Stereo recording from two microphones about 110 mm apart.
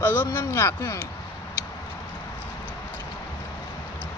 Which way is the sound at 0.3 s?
20° left (ahead or behind).